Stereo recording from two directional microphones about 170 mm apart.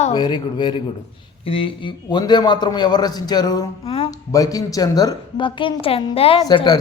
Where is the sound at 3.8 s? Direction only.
35° left (ahead or behind).